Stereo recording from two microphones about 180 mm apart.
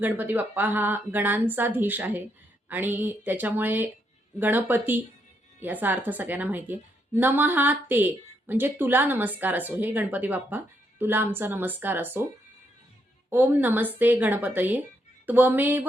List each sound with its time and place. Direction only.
0.0 s a woman's voice: 10° right (ahead or behind)
13.3 s a woman's voice: 10° right (ahead or behind)